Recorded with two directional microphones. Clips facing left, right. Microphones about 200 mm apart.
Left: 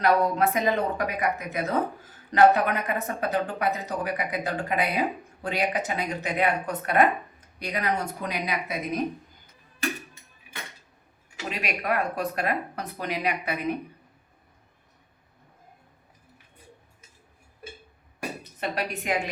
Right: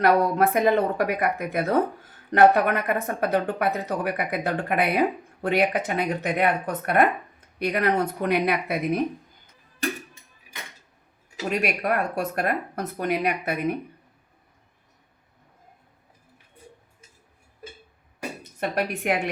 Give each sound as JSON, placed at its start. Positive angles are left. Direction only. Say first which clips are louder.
{"t": 0.0, "sound": "speech", "louder": "right 2 dB", "side_deg": -55}
{"t": 11.4, "sound": "speech", "louder": "right 5 dB", "side_deg": -50}
{"t": 18.6, "sound": "speech", "louder": "right 4 dB", "side_deg": -50}